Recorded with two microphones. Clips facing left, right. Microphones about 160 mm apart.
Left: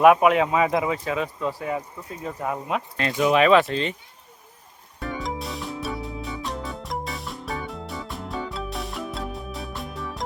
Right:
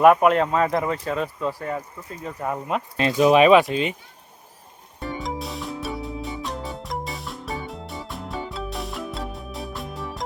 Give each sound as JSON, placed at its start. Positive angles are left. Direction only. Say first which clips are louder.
{"t": 0.0, "sound": "speech", "louder": "even", "side_deg": 5}
{"t": 3.0, "sound": "speech", "louder": "right 4 dB", "side_deg": -25}
{"t": 5.2, "sound": "music", "louder": "right 1 dB", "side_deg": 0}